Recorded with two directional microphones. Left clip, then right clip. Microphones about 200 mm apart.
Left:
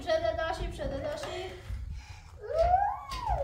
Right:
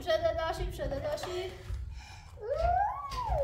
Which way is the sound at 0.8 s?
40° right (ahead or behind).